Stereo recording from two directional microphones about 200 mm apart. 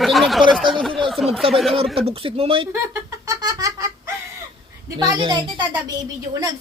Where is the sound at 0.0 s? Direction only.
Centre (ahead or behind).